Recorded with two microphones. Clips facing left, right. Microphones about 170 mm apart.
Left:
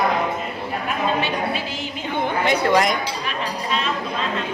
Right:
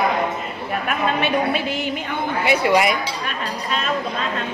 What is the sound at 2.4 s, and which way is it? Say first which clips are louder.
Speech: right 1 dB; 10° right (ahead or behind).